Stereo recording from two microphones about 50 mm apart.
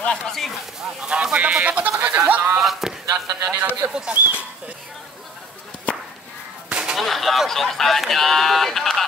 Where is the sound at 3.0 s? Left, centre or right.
Right.